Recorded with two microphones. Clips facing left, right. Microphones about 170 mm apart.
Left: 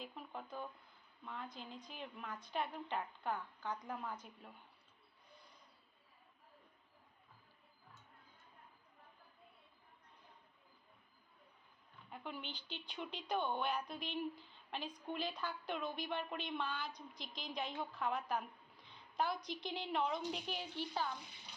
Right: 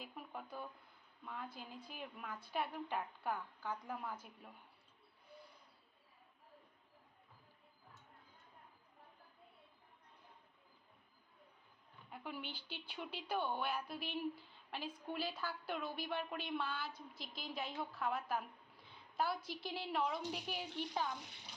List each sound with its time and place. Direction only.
0.0 s a sound: 10° right (ahead or behind)
1.2 s a woman's voice: 10° right (ahead or behind)
12.1 s a woman's voice: 10° right (ahead or behind)